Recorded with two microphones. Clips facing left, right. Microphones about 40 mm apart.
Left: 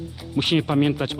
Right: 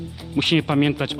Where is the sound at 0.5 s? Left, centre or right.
Right.